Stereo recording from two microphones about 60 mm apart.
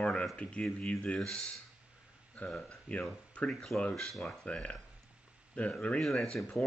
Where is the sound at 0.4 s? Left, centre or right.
Centre.